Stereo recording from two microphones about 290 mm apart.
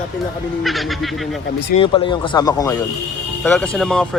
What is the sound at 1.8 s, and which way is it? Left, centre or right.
Speech, centre.